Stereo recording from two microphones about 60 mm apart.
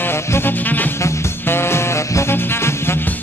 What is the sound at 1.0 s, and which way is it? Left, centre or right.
Music, left.